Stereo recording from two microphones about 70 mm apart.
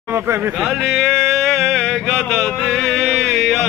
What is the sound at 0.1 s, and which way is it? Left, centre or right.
Speech, right.